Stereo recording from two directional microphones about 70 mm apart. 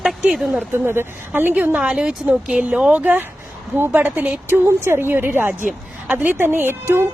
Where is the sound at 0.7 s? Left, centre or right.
Right.